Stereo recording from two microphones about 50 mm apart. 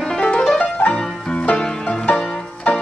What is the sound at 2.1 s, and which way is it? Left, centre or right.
Music, left.